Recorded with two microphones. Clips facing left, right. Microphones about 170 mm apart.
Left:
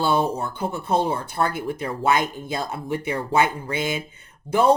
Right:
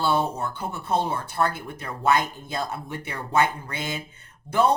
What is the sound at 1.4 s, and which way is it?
Speech, 15° left (ahead or behind).